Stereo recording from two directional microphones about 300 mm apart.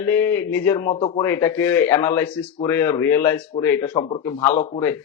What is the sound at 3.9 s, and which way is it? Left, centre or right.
Speech, left.